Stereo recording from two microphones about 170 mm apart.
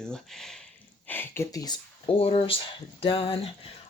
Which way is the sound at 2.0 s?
35° left (ahead or behind).